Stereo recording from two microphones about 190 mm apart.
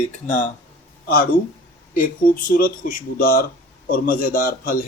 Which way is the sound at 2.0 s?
50° left (ahead or behind).